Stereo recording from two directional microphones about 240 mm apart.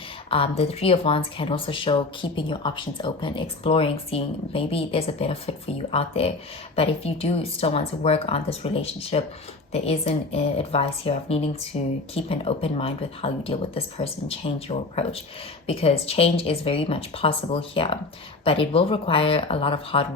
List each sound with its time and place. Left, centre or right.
0.3 s speech: left